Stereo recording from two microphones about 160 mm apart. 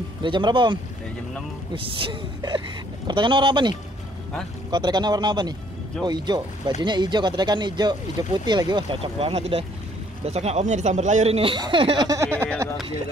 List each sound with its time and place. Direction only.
0.2 s speech: 30° right (ahead or behind)
1.8 s speech: 35° right (ahead or behind)
12.1 s speech: 15° right (ahead or behind)